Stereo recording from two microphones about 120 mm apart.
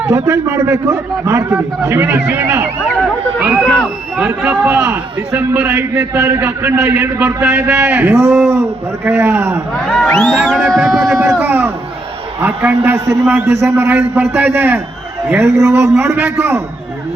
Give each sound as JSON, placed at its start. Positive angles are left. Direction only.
{"t": 0.1, "sound": "a man's voice", "side_deg": -25}
{"t": 9.8, "sound": "a sound", "side_deg": 5}
{"t": 11.2, "sound": "a man's voice", "side_deg": -20}